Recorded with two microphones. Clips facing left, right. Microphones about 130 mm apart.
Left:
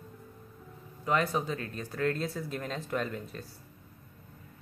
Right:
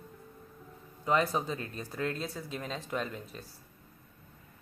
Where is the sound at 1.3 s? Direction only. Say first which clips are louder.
Left 1 dB; 20° right (ahead or behind).